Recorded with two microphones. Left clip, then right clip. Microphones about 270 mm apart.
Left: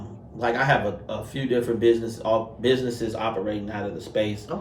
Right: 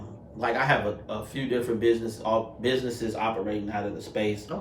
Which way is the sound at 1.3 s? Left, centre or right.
Centre.